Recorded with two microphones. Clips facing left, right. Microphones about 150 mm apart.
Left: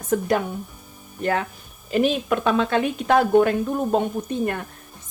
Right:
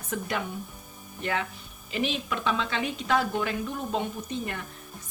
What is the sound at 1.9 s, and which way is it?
Speech, 50° left (ahead or behind).